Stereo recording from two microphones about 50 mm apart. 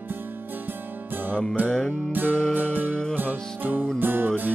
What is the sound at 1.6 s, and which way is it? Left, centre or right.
Music, centre.